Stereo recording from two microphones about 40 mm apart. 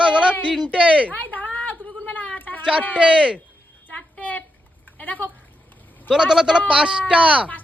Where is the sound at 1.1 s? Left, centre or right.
Left.